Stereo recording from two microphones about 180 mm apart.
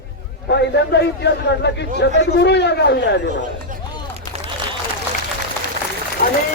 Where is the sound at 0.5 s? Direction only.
70° left (ahead or behind).